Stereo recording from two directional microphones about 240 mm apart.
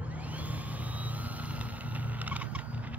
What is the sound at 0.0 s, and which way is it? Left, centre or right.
Vehicle, centre.